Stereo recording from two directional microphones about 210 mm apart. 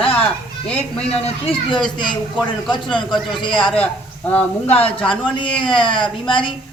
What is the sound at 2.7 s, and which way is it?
Speech, 20° left (ahead or behind).